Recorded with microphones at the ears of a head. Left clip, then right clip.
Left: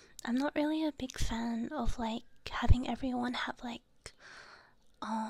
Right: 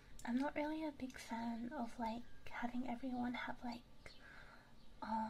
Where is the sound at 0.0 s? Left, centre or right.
Left.